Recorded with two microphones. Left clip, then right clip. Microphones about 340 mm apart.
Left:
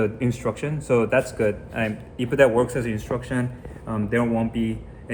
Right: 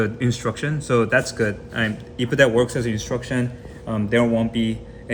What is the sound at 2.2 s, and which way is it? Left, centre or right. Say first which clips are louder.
A man's voice: right 1 dB; right.